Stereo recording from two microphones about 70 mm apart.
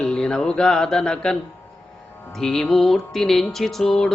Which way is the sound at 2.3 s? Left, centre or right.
Centre.